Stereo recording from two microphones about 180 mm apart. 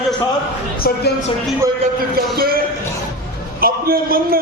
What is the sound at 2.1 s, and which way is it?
A man's voice, 55° right (ahead or behind).